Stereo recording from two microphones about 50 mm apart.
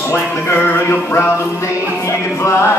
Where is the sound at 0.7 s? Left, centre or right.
Left.